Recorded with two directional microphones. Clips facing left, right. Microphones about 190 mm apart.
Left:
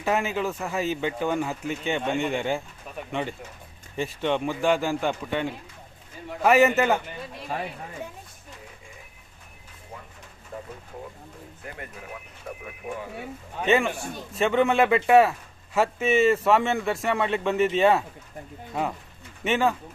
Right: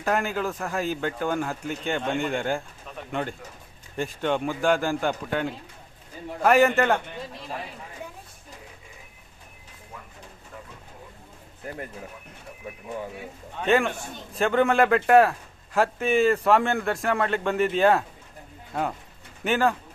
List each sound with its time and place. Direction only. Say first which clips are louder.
0.0 s a man's voice: even; 5° left (ahead or behind)
11.6 s speech: right 5 dB; 40° right (ahead or behind)
12.5 s a sound: left 8 dB; 60° left (ahead or behind)
13.6 s a man's voice: even; centre (ahead or behind)